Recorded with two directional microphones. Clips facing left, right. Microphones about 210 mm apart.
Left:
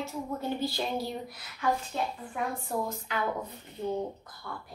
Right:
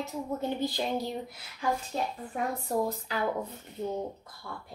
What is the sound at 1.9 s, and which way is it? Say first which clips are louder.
A woman's voice: right 1 dB; 40° right (ahead or behind).